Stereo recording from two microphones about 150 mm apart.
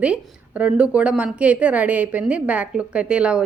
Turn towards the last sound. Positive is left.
turn(degrees=-5)  # may be behind; listen again after turning